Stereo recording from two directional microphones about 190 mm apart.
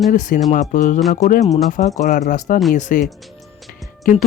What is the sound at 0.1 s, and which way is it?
Speech, 40° left (ahead or behind).